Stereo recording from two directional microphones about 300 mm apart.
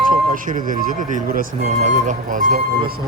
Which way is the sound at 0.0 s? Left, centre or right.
Right.